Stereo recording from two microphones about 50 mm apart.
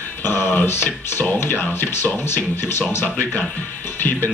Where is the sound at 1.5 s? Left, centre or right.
Left.